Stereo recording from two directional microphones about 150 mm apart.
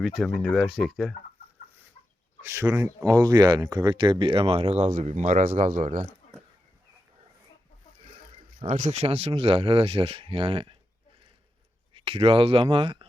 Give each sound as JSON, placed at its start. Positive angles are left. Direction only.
{"t": 0.0, "sound": "speech", "side_deg": 0}
{"t": 2.4, "sound": "speech", "side_deg": -15}
{"t": 8.6, "sound": "speech", "side_deg": -60}
{"t": 11.9, "sound": "speech", "side_deg": -40}